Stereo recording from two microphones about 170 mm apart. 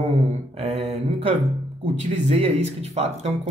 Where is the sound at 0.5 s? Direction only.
35° right (ahead or behind).